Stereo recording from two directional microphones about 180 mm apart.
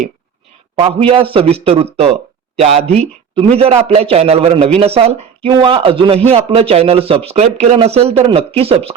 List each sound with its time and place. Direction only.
0.8 s speech: 30° right (ahead or behind)